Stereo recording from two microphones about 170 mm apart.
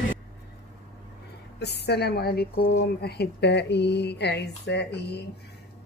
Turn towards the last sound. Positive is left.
turn(degrees=75)  # may be behind; listen again after turning